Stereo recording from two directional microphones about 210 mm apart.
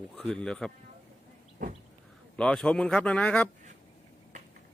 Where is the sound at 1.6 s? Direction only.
40° right (ahead or behind).